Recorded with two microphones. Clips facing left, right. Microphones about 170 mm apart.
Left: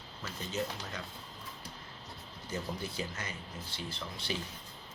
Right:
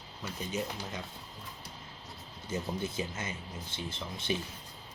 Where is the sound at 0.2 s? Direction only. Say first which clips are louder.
Right 1 dB; 15° right (ahead or behind).